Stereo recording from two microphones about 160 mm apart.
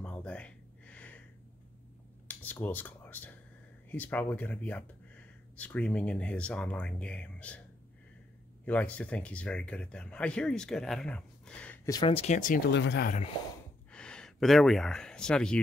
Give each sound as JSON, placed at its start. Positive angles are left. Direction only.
{"t": 0.0, "sound": "a sound", "side_deg": 10}
{"t": 2.2, "sound": "a sound", "side_deg": 10}
{"t": 3.9, "sound": "speech", "side_deg": 10}
{"t": 8.6, "sound": "speech", "side_deg": 10}
{"t": 11.8, "sound": "speech", "side_deg": 20}
{"t": 12.1, "sound": "speech", "side_deg": 35}
{"t": 12.4, "sound": "speech", "side_deg": 60}
{"t": 13.9, "sound": "speech", "side_deg": 5}